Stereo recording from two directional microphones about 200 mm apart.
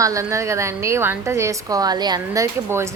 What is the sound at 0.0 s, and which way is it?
A woman's voice, 15° right (ahead or behind).